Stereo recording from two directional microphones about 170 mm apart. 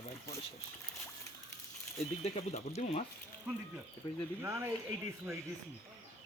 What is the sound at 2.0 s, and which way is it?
Speech, 40° left (ahead or behind).